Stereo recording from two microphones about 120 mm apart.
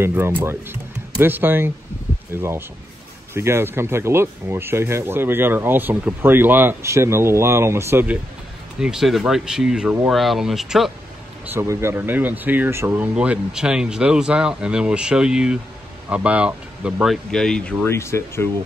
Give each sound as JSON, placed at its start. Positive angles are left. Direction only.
{"t": 0.0, "sound": "speech", "side_deg": -20}
{"t": 8.7, "sound": "speech", "side_deg": -5}
{"t": 11.4, "sound": "speech", "side_deg": -20}
{"t": 17.8, "sound": "speech", "side_deg": 20}